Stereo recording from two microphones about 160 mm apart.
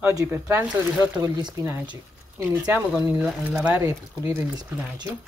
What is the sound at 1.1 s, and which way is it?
Speech, 25° right (ahead or behind).